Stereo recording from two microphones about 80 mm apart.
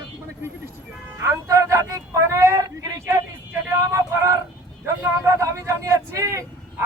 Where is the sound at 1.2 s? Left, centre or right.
Right.